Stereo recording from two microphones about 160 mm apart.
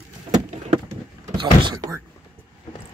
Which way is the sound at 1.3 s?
30° right (ahead or behind).